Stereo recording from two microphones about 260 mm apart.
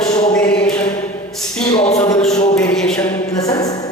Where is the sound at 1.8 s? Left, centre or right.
Centre.